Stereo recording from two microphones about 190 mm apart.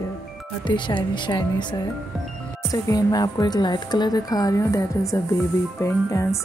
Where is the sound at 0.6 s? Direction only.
25° left (ahead or behind).